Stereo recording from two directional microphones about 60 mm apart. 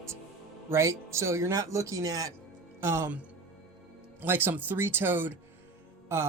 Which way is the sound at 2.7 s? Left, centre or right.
Right.